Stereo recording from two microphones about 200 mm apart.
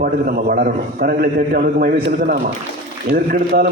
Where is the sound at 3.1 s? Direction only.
50° right (ahead or behind).